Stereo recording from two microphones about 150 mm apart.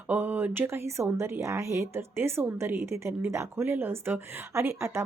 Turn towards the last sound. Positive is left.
turn(degrees=-20)  # may be behind; listen again after turning